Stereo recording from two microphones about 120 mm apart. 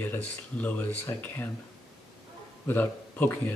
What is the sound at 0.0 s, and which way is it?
Speech, 15° left (ahead or behind).